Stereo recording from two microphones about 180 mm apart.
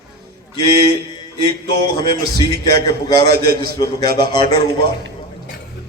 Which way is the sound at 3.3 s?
60° right (ahead or behind).